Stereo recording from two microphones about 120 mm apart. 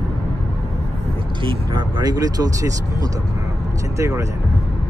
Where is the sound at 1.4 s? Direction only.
40° right (ahead or behind).